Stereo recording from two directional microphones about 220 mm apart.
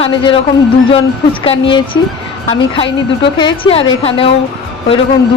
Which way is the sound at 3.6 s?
25° left (ahead or behind).